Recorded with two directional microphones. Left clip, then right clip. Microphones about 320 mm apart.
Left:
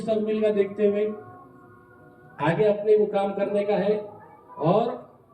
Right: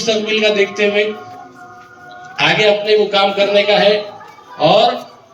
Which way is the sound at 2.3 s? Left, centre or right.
Right.